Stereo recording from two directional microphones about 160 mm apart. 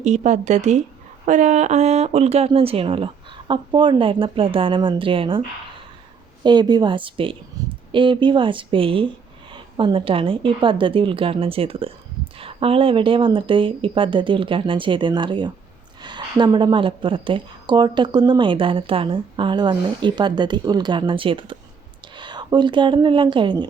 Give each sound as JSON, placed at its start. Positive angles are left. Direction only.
{"t": 0.0, "sound": "speech", "side_deg": -45}
{"t": 6.4, "sound": "speech", "side_deg": -25}
{"t": 7.6, "sound": "a sound", "side_deg": -25}
{"t": 7.9, "sound": "speech", "side_deg": -30}